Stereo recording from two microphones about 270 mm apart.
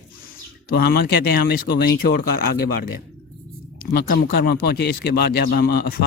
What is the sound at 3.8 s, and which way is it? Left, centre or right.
Speech, left.